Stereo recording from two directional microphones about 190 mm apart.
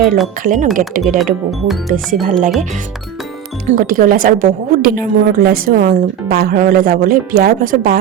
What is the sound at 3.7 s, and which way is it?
A woman's voice, 45° right (ahead or behind).